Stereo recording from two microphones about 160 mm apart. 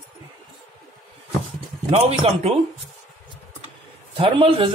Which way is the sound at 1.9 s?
40° right (ahead or behind).